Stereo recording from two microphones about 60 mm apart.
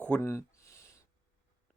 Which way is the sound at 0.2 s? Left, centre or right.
Left.